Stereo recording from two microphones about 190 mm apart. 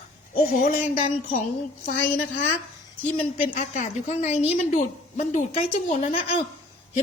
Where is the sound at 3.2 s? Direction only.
40° left (ahead or behind).